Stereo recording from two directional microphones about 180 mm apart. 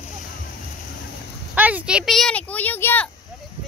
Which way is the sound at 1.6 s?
10° right (ahead or behind).